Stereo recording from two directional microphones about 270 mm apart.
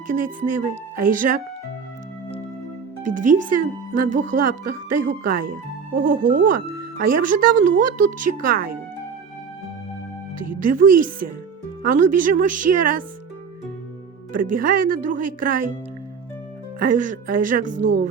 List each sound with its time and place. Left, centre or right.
0.1 s speech: right
3.0 s speech: right
10.4 s speech: right
14.3 s speech: right
16.8 s speech: right